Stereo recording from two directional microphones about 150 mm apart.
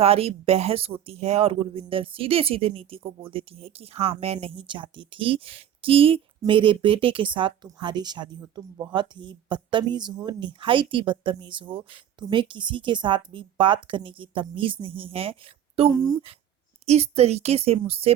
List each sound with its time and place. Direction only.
0.0 s speech: 40° right (ahead or behind)
15.9 s speech: 25° right (ahead or behind)
16.8 s speech: 45° right (ahead or behind)